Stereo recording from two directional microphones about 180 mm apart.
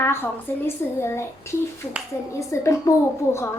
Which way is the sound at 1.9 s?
5° right (ahead or behind).